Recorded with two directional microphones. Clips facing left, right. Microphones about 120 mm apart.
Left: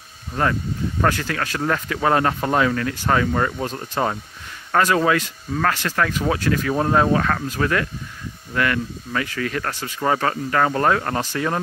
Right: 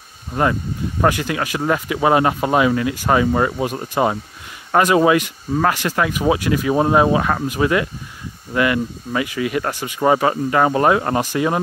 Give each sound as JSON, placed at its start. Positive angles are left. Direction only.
{"t": 0.3, "sound": "speech", "side_deg": -15}